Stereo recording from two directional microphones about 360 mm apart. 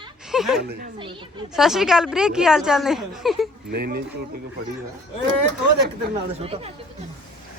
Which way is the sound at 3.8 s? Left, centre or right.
Right.